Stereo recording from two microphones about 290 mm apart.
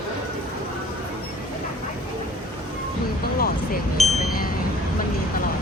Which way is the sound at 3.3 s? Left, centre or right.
Left.